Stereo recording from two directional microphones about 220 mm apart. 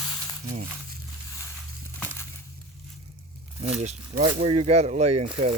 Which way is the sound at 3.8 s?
35° right (ahead or behind).